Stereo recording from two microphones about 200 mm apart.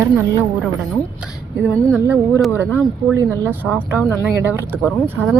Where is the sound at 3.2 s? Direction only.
10° right (ahead or behind).